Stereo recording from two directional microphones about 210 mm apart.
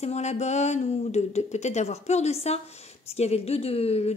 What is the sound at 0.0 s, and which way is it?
A woman's voice, 30° left (ahead or behind).